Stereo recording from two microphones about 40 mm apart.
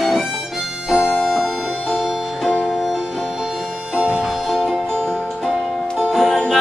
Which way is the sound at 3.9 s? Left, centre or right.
Right.